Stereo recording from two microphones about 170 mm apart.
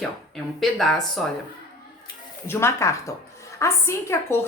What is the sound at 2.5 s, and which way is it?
A woman's voice, 15° left (ahead or behind).